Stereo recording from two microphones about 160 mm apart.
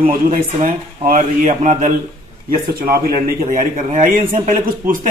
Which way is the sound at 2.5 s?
65° right (ahead or behind).